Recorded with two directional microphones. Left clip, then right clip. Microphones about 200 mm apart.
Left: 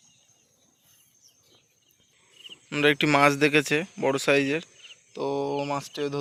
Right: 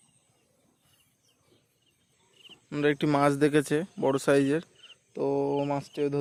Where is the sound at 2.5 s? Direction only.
5° right (ahead or behind).